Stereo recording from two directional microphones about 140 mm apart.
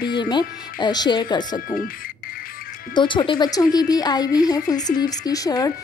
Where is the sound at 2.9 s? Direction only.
35° left (ahead or behind).